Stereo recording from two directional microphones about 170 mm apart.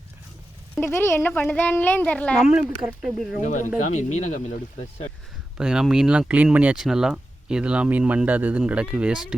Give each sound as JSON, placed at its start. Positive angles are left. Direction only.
{"t": 0.8, "sound": "speech", "side_deg": 10}
{"t": 3.4, "sound": "speech", "side_deg": 45}
{"t": 5.5, "sound": "speech", "side_deg": -5}